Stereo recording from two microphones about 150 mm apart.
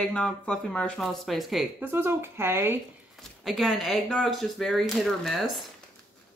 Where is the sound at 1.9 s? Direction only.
15° right (ahead or behind).